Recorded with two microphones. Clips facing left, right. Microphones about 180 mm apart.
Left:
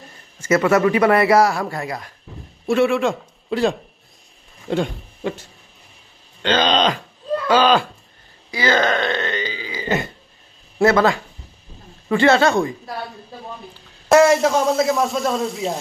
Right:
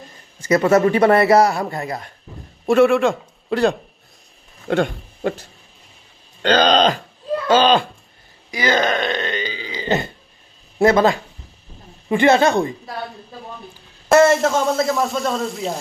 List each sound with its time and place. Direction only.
0.4 s a man's voice: 35° right (ahead or behind)
1.4 s speech: centre (ahead or behind)
1.7 s a man's voice: 20° right (ahead or behind)
2.8 s a man's voice: centre (ahead or behind)
4.7 s speech: 60° right (ahead or behind)
6.4 s speech: 40° right (ahead or behind)
8.5 s burping: 15° right (ahead or behind)
10.8 s a man's voice: 20° right (ahead or behind)
14.1 s speech: centre (ahead or behind)